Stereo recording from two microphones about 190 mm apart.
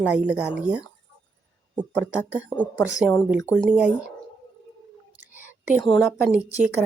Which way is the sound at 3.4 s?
15° left (ahead or behind).